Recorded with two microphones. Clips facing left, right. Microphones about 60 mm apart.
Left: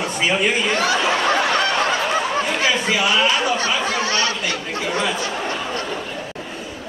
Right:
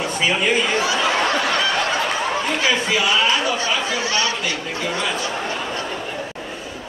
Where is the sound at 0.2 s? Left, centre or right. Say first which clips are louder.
Even; centre.